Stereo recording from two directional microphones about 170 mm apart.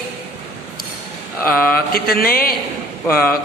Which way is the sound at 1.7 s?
60° left (ahead or behind).